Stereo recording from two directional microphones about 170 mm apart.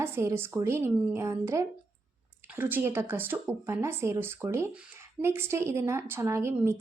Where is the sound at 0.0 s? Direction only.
15° right (ahead or behind).